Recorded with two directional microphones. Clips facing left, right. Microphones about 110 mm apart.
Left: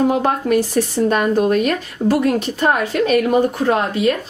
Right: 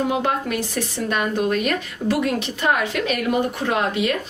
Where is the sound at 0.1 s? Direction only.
40° left (ahead or behind).